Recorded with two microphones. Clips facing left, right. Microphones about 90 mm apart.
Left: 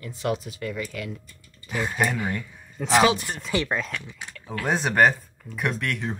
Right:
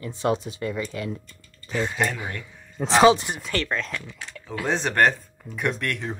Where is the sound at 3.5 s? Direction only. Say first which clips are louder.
Left 2 dB; 15° left (ahead or behind).